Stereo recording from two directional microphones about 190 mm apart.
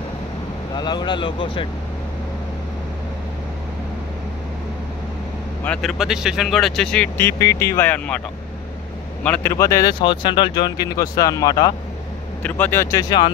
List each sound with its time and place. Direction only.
0.7 s speech: 20° left (ahead or behind)
5.6 s speech: 5° left (ahead or behind)
9.2 s speech: 10° left (ahead or behind)